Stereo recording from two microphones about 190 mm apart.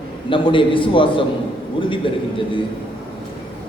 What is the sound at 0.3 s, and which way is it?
A man's voice, 25° left (ahead or behind).